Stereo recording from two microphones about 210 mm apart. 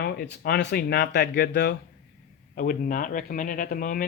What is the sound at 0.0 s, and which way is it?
Speech, 50° left (ahead or behind).